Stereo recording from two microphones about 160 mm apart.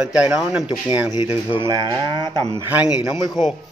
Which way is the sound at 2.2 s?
25° left (ahead or behind).